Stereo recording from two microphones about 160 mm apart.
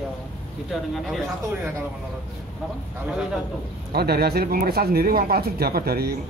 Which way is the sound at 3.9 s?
80° right.